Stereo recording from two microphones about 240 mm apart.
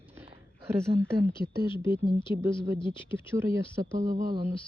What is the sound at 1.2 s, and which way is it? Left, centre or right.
Speech, right.